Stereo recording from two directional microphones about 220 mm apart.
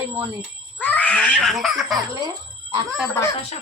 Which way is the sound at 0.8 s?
5° left (ahead or behind).